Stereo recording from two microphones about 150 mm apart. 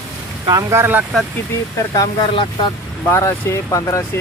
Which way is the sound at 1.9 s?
30° left (ahead or behind).